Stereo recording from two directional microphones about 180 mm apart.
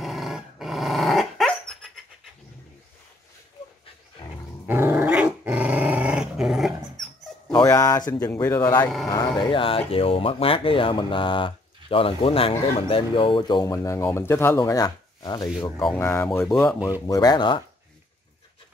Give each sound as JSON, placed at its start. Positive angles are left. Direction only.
{"t": 0.0, "sound": "dog", "side_deg": 0}
{"t": 4.6, "sound": "dog", "side_deg": -10}
{"t": 7.5, "sound": "dog", "side_deg": 20}
{"t": 8.1, "sound": "speech", "side_deg": 20}
{"t": 9.1, "sound": "speech", "side_deg": 25}
{"t": 16.0, "sound": "speech", "side_deg": 10}